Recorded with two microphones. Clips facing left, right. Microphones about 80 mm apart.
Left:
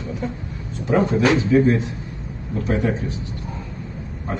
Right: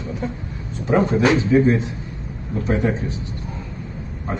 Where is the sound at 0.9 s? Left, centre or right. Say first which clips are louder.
Right 1 dB; right.